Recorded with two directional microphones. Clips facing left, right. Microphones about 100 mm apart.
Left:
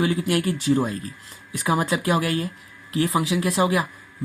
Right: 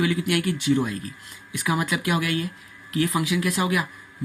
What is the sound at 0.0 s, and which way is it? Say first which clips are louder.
Speech: left 1 dB; 30° left (ahead or behind).